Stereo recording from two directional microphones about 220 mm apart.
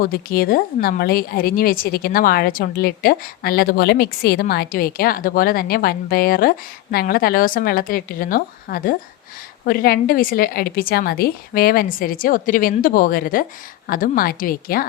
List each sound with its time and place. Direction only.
0.0 s a woman's voice: 40° left (ahead or behind)